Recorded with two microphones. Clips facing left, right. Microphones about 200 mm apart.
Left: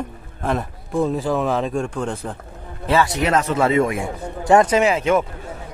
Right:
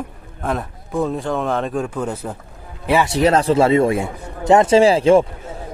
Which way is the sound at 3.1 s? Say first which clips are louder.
Right 5 dB; 30° right (ahead or behind).